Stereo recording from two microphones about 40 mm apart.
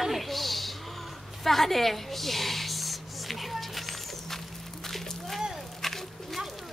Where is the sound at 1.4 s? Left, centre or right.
Centre.